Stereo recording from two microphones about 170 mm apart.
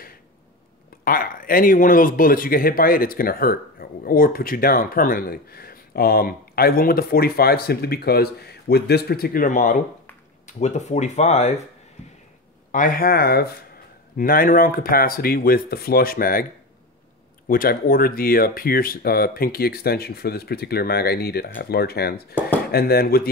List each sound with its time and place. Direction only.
1.0 s speech: 55° left (ahead or behind); by 11.6 s 40° left (ahead or behind)
12.7 s speech: 55° left (ahead or behind)
17.5 s speech: 55° left (ahead or behind)